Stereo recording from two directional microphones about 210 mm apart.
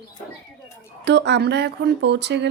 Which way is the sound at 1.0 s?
55° right (ahead or behind).